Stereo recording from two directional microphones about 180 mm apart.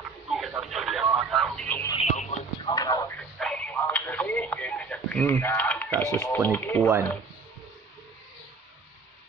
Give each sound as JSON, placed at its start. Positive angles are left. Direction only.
{"t": 0.3, "sound": "radio", "side_deg": 0}
{"t": 2.0, "sound": "music", "side_deg": 40}
{"t": 2.6, "sound": "a sound", "side_deg": 20}
{"t": 3.2, "sound": "radio", "side_deg": 5}
{"t": 6.1, "sound": "speech", "side_deg": 10}